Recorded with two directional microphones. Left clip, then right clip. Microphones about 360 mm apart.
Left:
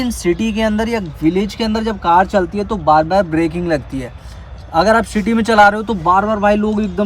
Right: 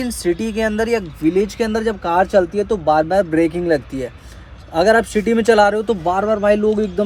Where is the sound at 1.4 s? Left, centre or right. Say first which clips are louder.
Right 1 dB; centre.